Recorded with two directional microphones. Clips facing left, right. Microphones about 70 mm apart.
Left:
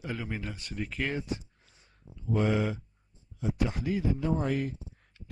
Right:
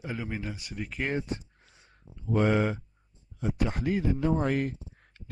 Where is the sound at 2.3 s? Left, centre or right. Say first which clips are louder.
Right 3 dB; right.